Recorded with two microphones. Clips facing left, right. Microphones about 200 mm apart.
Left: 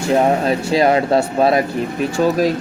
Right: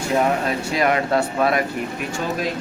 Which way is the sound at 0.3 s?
30° left (ahead or behind).